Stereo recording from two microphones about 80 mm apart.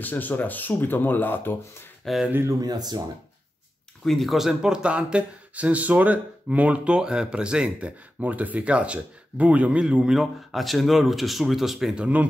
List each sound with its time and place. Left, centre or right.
0.0 s speech: left
2.1 s speech: centre
2.6 s speech: right
4.0 s speech: centre